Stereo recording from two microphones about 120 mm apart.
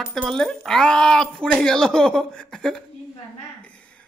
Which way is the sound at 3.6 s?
10° left (ahead or behind).